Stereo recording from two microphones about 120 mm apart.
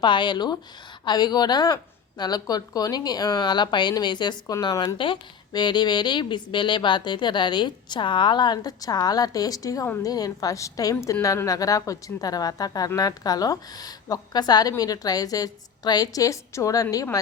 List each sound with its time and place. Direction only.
0.0 s a woman's voice: 40° left (ahead or behind)